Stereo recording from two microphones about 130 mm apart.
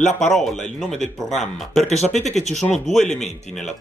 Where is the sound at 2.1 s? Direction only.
60° left (ahead or behind).